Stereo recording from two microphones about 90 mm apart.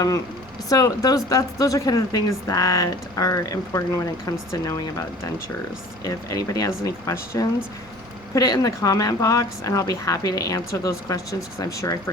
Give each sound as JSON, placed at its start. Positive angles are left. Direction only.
{"t": 0.7, "sound": "speech", "side_deg": 40}
{"t": 6.1, "sound": "speech", "side_deg": 40}